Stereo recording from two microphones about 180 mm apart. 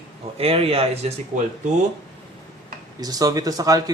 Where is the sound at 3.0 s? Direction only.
20° right (ahead or behind).